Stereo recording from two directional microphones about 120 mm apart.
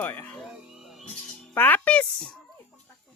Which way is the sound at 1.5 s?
15° left (ahead or behind).